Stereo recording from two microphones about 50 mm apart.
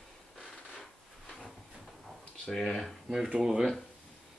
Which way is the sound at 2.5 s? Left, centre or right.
Centre.